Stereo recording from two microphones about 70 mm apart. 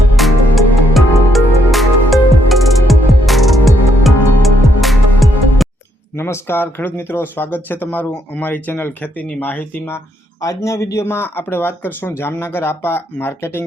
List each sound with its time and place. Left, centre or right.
0.2 s music: centre
6.1 s speech: left
10.4 s speech: left
11.0 s speech: left